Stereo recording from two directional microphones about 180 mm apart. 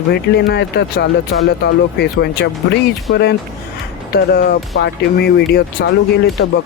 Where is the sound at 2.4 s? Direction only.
70° left (ahead or behind).